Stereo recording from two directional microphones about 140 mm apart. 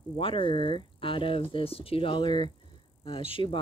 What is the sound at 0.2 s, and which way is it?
Speech, 40° left (ahead or behind).